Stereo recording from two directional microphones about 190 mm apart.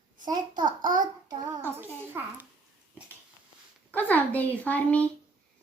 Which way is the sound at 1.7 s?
10° right (ahead or behind).